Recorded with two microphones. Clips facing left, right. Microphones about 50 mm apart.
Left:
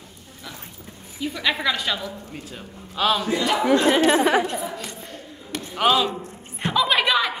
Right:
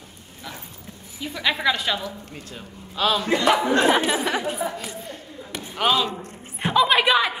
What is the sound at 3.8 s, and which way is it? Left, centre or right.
Speech, centre.